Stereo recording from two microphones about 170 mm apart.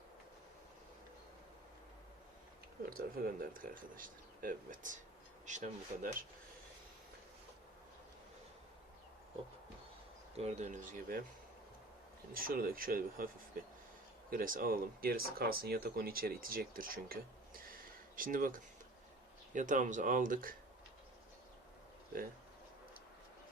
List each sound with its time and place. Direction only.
3.2 s speech: 60° right (ahead or behind)
10.3 s speech: 40° right (ahead or behind)
12.3 s speech: 60° right (ahead or behind)